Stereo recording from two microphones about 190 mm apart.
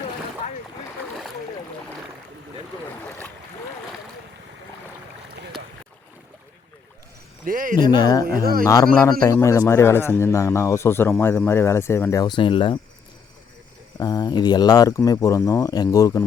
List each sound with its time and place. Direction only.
3.1 s boat: 10° left (ahead or behind)
5.3 s boat: 55° right (ahead or behind)
7.4 s speech: 45° right (ahead or behind)
7.9 s speech: 20° left (ahead or behind)
8.2 s speech: 50° right (ahead or behind)
8.6 s speech: 20° left (ahead or behind)
14.0 s speech: 20° left (ahead or behind)